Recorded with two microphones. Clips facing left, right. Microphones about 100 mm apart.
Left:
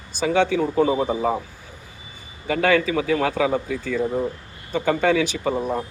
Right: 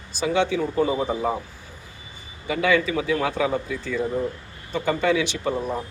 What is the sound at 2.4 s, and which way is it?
Speech, 55° left (ahead or behind).